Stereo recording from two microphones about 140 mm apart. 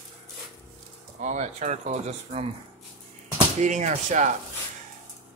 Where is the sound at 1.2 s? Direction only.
60° right (ahead or behind).